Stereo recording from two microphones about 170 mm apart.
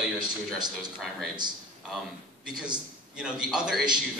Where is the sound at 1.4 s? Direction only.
25° right (ahead or behind).